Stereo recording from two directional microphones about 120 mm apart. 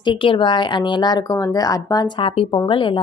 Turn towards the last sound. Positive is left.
turn(degrees=45)  # may be behind; listen again after turning